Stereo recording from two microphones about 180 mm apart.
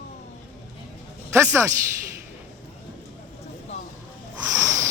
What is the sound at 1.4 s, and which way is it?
Speech, 15° right (ahead or behind).